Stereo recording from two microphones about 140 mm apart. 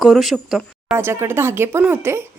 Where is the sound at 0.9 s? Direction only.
20° right (ahead or behind).